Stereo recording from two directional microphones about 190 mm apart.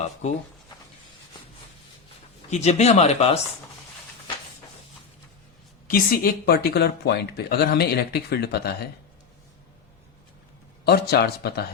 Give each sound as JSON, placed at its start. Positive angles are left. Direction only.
{"t": 0.0, "sound": "speech", "side_deg": 35}
{"t": 2.5, "sound": "speech", "side_deg": 35}
{"t": 5.9, "sound": "speech", "side_deg": 50}
{"t": 10.8, "sound": "speech", "side_deg": 55}